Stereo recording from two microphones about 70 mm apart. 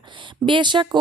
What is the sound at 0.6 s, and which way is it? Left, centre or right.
Speech, right.